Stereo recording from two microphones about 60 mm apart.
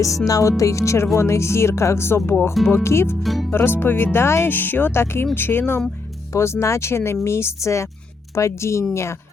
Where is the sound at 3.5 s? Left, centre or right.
Left.